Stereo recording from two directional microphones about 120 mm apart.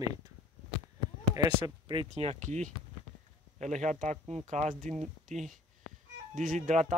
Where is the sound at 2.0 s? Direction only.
70° right (ahead or behind); by 4.9 s 90° right.